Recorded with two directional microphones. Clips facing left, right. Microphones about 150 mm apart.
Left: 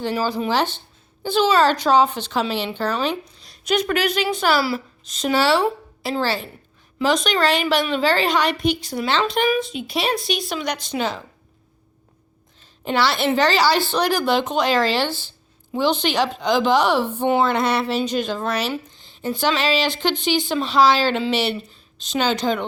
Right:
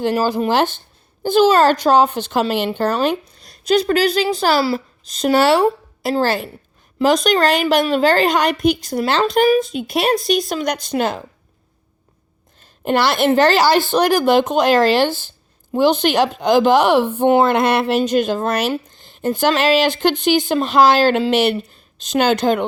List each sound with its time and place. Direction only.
0.0 s a woman's voice: 50° right (ahead or behind)
12.5 s a woman's voice: 50° right (ahead or behind)